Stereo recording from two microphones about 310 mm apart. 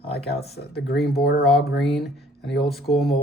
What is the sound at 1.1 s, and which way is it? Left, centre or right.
Speech, left.